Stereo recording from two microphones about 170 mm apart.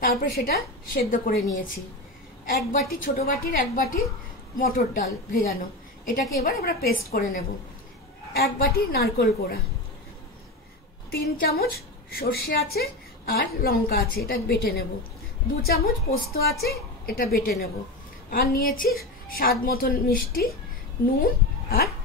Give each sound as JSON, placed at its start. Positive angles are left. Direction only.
{"t": 0.0, "sound": "a woman's voice", "side_deg": 60}
{"t": 11.1, "sound": "a woman's voice", "side_deg": 65}